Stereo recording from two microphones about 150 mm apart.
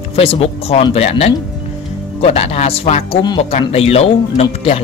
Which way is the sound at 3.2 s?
30° left (ahead or behind).